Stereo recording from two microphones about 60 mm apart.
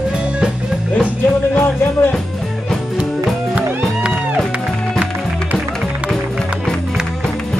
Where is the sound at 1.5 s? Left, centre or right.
Left.